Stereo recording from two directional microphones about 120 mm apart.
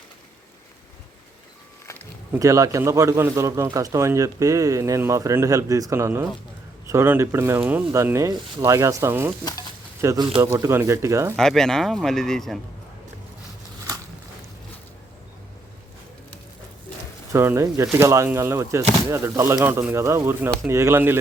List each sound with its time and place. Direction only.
2.3 s a man's voice: 25° right (ahead or behind)
7.6 s speech: 10° right (ahead or behind)
7.9 s a man's voice: 25° right (ahead or behind)
11.3 s speech: 5° left (ahead or behind)
17.3 s a man's voice: 20° right (ahead or behind)